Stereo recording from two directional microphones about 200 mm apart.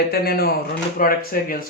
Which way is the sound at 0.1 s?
50° left (ahead or behind).